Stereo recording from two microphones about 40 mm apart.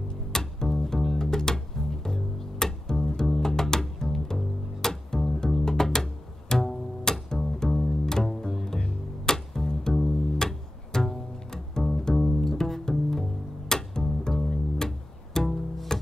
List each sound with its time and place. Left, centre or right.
0.1 s music: centre
6.5 s bowed string instrument: centre
9.2 s music: centre